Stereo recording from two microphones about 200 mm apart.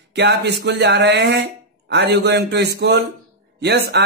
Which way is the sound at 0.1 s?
55° right (ahead or behind).